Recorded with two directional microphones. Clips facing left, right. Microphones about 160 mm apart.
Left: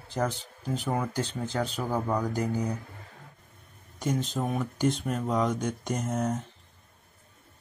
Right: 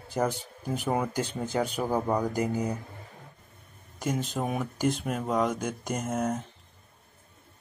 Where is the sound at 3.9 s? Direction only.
5° right (ahead or behind).